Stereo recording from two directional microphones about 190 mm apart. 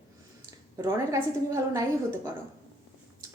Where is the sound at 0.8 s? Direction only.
15° right (ahead or behind).